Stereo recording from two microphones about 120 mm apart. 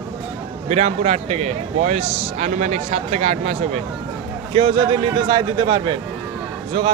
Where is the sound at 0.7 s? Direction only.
65° right (ahead or behind).